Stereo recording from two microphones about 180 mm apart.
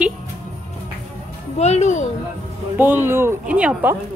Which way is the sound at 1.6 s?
40° left (ahead or behind).